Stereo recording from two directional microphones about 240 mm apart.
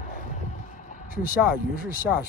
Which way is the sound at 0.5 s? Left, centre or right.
Left.